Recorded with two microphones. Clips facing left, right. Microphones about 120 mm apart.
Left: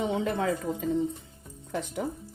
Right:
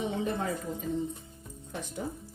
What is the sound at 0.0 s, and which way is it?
Speech, 90° left.